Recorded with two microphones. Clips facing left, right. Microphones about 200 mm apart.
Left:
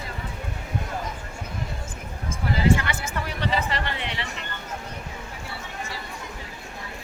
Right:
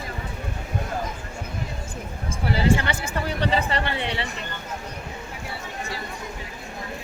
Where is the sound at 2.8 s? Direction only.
30° right (ahead or behind).